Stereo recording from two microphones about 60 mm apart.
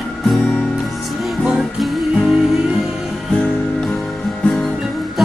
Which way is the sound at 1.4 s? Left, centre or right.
Centre.